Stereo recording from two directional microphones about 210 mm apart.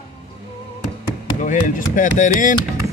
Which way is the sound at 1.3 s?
40° left (ahead or behind).